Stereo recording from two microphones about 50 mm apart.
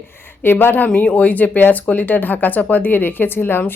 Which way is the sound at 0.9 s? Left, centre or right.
Left.